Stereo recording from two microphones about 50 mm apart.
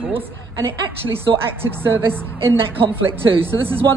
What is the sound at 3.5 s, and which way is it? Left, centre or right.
Speech, right.